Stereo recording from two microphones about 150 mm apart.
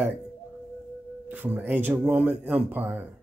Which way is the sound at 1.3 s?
10° right (ahead or behind).